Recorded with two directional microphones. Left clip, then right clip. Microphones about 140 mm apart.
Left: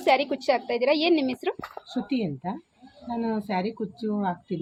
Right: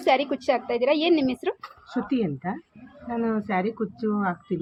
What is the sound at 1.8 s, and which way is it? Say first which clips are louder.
Speech: right 4 dB; 35° left (ahead or behind).